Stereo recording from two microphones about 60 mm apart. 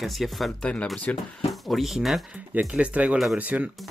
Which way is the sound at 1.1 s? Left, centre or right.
Left.